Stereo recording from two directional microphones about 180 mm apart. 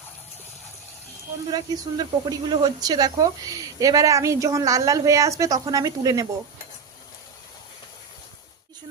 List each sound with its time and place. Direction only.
1.5 s speech: 25° right (ahead or behind)